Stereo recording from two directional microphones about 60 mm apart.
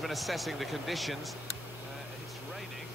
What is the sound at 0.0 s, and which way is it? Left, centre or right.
Speech, centre.